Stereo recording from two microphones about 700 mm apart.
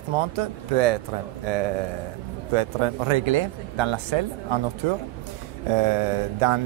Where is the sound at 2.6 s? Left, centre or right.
Right.